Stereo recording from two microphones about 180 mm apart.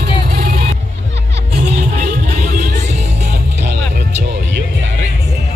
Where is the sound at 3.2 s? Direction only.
70° right (ahead or behind).